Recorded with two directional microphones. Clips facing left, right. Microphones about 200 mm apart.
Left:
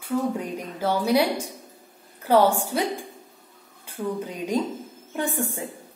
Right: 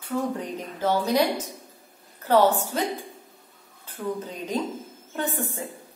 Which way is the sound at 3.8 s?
10° left (ahead or behind).